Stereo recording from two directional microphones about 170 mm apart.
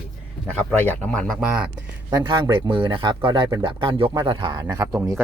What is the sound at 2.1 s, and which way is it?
Speech, 25° right (ahead or behind).